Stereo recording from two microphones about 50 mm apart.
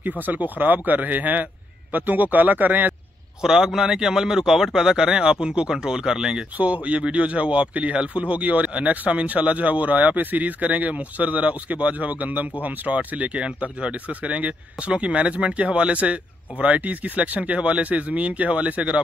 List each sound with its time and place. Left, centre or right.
0.2 s speech: right
3.4 s a man's voice: centre
6.6 s speech: right